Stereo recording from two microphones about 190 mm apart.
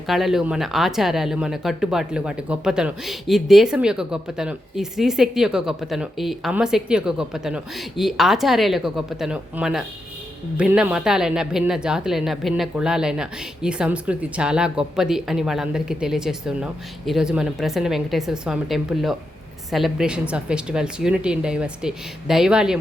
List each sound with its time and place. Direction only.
0.1 s speech: centre (ahead or behind)